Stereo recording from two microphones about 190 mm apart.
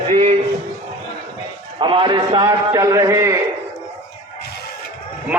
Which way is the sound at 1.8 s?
25° right (ahead or behind).